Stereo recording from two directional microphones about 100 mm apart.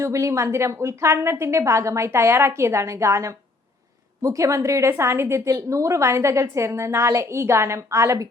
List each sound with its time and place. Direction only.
0.0 s a woman's voice: 30° right (ahead or behind)